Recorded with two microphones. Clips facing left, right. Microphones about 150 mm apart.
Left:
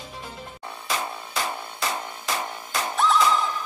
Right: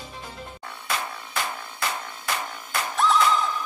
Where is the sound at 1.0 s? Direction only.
20° left (ahead or behind).